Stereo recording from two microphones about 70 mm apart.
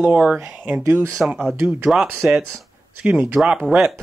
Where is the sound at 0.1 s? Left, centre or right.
Centre.